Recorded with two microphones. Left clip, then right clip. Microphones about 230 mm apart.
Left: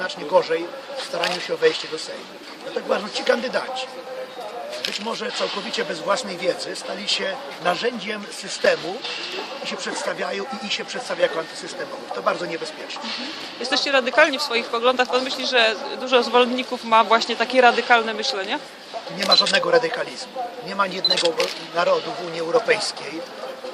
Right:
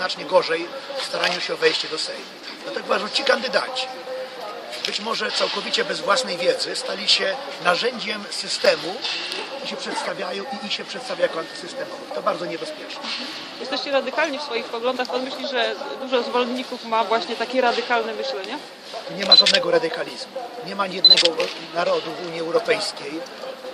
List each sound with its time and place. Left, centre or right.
0.0 s speech: centre
2.9 s speech: centre
5.0 s speech: centre
13.7 s a man's voice: left
19.5 s speech: centre
21.0 s speech: centre
21.8 s speech: centre